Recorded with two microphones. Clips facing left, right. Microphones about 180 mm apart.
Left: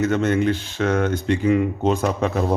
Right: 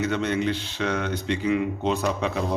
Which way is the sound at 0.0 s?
45° left (ahead or behind).